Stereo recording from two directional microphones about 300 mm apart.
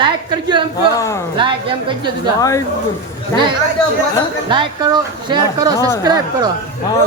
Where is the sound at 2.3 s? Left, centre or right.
Centre.